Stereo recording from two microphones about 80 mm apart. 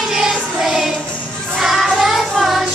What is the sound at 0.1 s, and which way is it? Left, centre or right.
Music, centre.